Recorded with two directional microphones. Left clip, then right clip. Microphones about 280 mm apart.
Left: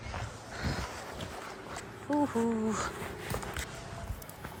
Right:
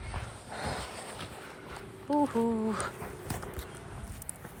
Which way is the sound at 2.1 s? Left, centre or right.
Centre.